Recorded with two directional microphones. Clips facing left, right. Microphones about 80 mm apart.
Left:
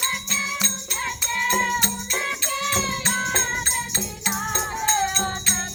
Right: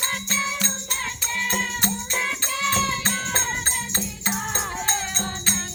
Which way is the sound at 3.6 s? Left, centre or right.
Right.